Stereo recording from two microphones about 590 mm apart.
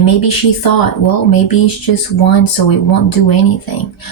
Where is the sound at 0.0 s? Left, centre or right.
Left.